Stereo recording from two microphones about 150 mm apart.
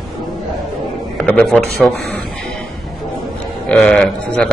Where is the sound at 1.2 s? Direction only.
10° left (ahead or behind).